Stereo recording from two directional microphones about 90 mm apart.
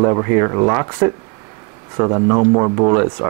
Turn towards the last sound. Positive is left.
turn(degrees=-30)  # may be behind; listen again after turning